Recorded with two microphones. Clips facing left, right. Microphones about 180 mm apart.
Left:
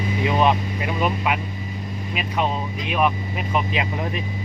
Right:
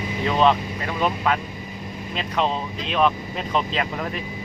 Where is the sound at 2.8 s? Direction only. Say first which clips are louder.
Right 1 dB; 10° left (ahead or behind).